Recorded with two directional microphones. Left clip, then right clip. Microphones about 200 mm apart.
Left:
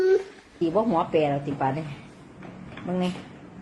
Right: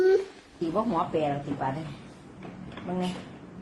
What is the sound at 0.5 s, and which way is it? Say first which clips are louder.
A man's voice: left 4 dB; 40° left (ahead or behind).